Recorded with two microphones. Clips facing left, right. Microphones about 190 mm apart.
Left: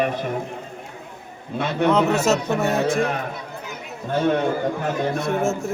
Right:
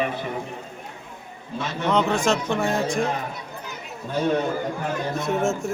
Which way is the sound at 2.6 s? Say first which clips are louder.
Left 3 dB; 65° left (ahead or behind).